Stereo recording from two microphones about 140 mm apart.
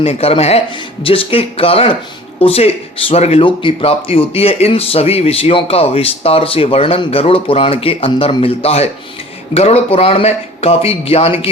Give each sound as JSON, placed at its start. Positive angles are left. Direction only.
{"t": 0.0, "sound": "speech", "side_deg": 45}